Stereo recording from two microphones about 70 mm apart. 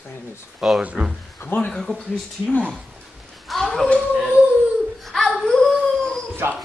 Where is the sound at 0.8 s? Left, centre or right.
Centre.